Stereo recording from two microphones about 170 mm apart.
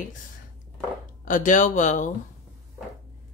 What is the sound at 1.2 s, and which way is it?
Speech, 50° left (ahead or behind).